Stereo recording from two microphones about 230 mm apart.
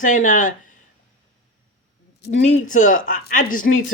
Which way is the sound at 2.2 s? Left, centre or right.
Left.